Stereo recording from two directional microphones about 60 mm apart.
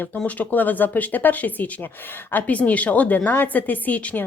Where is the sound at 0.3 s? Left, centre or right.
Left.